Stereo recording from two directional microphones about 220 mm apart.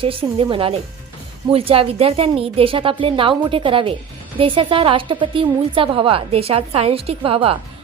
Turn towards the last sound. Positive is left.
turn(degrees=-25)  # may be behind; listen again after turning